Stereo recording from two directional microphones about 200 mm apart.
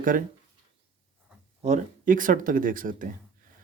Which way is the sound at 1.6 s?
40° right (ahead or behind).